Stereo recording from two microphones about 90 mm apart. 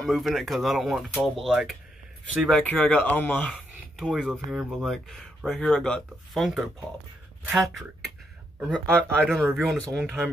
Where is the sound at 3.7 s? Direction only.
Centre (ahead or behind).